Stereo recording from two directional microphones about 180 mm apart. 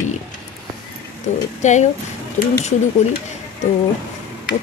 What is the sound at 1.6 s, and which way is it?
Speech, 40° left (ahead or behind).